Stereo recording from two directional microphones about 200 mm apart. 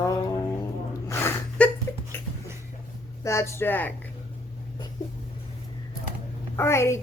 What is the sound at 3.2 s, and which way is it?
Speech, 15° left (ahead or behind).